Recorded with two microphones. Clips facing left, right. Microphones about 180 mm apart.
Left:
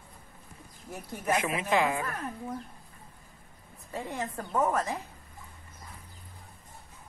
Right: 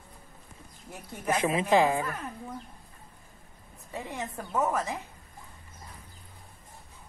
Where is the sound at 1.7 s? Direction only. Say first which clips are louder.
Right 3 dB; 30° right (ahead or behind).